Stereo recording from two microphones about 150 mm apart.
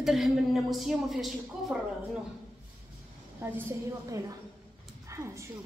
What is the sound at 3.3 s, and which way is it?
Speech, 15° right (ahead or behind).